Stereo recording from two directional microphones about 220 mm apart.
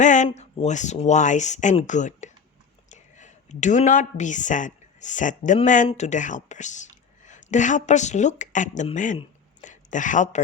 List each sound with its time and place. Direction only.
0.0 s speech: 35° left (ahead or behind)